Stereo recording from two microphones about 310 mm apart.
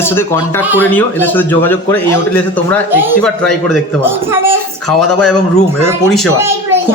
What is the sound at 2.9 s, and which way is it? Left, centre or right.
A man's voice, centre.